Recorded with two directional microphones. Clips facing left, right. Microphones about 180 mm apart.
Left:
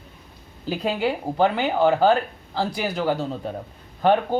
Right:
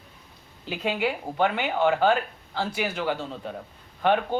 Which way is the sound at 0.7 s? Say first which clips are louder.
Left 3 dB; 35° left (ahead or behind).